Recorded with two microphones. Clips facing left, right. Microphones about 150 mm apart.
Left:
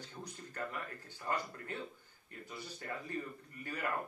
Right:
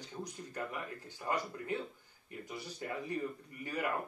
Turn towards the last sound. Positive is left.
turn(degrees=-15)  # may be behind; listen again after turning